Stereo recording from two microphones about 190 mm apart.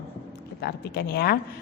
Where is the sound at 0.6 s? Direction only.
55° left (ahead or behind).